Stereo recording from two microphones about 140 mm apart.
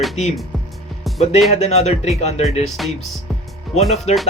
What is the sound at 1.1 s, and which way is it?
Speech, 50° left (ahead or behind).